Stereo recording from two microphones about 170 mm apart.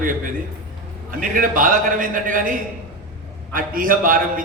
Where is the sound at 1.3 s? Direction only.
55° right (ahead or behind).